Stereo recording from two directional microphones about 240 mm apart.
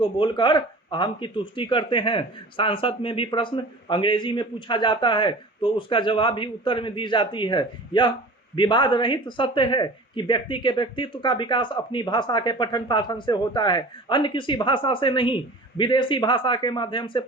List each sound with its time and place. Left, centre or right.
0.0 s speech: centre